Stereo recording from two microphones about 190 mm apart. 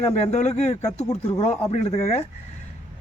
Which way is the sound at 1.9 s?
35° left (ahead or behind).